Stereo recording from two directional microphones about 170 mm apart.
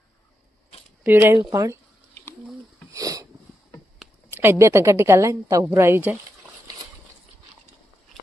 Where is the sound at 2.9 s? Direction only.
20° right (ahead or behind).